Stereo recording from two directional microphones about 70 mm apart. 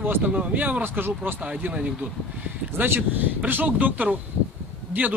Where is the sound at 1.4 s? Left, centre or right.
Centre.